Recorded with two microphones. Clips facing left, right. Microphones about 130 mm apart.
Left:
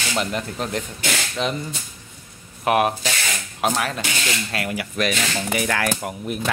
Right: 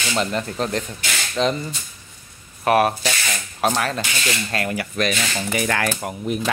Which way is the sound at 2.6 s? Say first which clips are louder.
Right 2 dB; 15° left (ahead or behind).